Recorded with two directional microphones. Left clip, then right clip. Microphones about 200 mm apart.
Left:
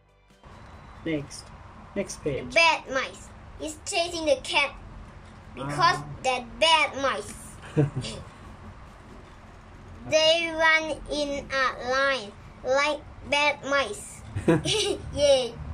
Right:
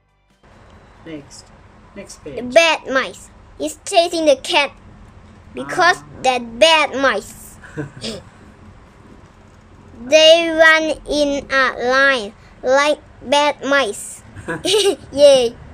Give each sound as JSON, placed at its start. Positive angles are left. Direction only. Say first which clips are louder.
{"t": 1.0, "sound": "speech", "louder": "left 3 dB", "side_deg": 10}
{"t": 2.5, "sound": "child singing", "louder": "right 9 dB", "side_deg": -40}
{"t": 5.5, "sound": "a woman's voice", "louder": "right 8 dB", "side_deg": -45}
{"t": 7.8, "sound": "speech", "louder": "left 3 dB", "side_deg": 10}
{"t": 10.0, "sound": "child singing", "louder": "right 12 dB", "side_deg": -40}